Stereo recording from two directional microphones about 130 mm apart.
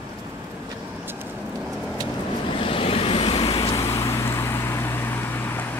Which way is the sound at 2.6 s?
45° left (ahead or behind).